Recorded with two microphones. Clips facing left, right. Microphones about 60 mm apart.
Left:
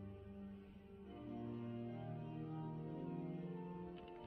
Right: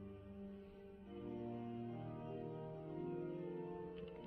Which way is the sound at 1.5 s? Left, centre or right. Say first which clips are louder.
Right 1 dB; centre.